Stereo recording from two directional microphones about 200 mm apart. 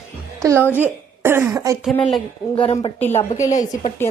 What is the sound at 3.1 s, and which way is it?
Speech, 35° left (ahead or behind).